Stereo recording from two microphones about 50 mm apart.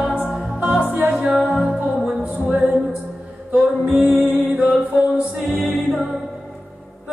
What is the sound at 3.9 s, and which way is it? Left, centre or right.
Music, right.